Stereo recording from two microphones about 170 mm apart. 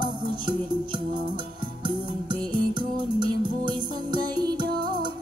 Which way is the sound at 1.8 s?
25° right (ahead or behind).